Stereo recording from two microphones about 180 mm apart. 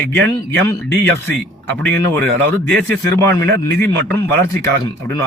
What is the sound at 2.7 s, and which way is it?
A man's voice, 10° left (ahead or behind).